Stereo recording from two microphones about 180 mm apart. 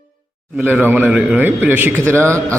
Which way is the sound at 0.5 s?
10° right (ahead or behind).